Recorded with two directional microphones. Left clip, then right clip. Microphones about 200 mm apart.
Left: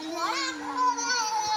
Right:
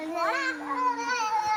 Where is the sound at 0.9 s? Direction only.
5° right (ahead or behind).